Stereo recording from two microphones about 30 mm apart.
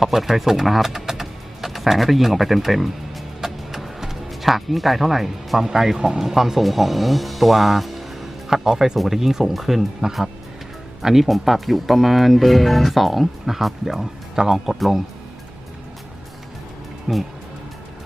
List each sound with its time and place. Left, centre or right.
0.0 s speech: centre
3.4 s music: centre
6.1 s speech: centre
8.4 s speech: centre
10.0 s speech: right
11.0 s speech: centre
14.7 s speech: centre
17.1 s speech: centre